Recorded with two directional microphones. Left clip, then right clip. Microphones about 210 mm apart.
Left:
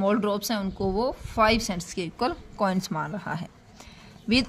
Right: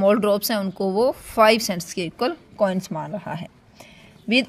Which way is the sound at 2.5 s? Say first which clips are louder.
Right 4 dB; 5° right (ahead or behind).